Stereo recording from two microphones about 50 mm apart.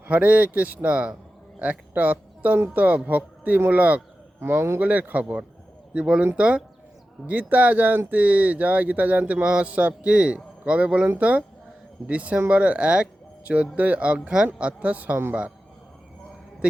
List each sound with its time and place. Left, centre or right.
0.1 s a man's voice: right
4.4 s speech: right
4.8 s speech: right
5.9 s a man's voice: right
15.1 s a man's voice: right